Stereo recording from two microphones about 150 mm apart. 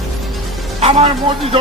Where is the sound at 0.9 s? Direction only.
40° right (ahead or behind).